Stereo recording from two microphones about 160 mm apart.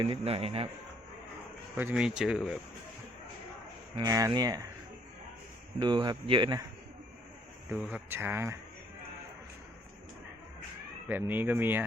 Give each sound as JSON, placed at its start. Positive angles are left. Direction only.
{"t": 0.0, "sound": "a man's voice", "side_deg": -35}
{"t": 1.7, "sound": "speech", "side_deg": -10}
{"t": 3.9, "sound": "speech", "side_deg": -25}
{"t": 5.8, "sound": "speech", "side_deg": -25}
{"t": 7.7, "sound": "speech", "side_deg": -5}
{"t": 11.1, "sound": "speech", "side_deg": -10}